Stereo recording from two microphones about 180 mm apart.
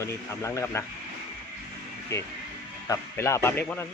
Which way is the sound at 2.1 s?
15° left (ahead or behind).